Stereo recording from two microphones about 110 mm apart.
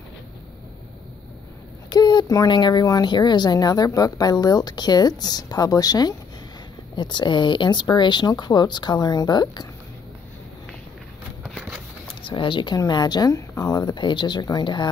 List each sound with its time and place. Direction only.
1.9 s speech: 40° left (ahead or behind)
12.2 s speech: 50° left (ahead or behind)